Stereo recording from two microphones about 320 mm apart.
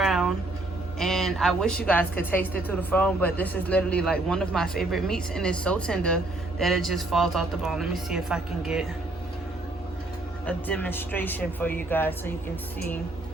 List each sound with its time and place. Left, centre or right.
0.0 s vehicle: centre
0.9 s a woman's voice: centre
10.4 s a man's voice: centre